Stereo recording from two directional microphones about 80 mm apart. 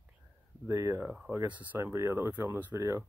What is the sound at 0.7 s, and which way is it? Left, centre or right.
Speech, right.